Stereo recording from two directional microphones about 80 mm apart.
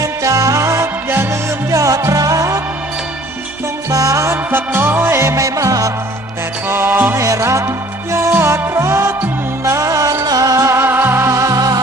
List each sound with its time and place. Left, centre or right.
0.0 s music: right
3.9 s music: right
4.5 s music: right
6.7 s music: right
7.2 s music: right